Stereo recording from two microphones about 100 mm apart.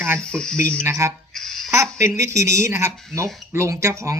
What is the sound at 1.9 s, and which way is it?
Speech, 30° right (ahead or behind).